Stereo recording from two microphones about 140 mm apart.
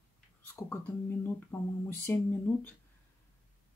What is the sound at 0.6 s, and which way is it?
Speech, 15° left (ahead or behind).